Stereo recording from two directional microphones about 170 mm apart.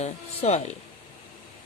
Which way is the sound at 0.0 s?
40° left (ahead or behind).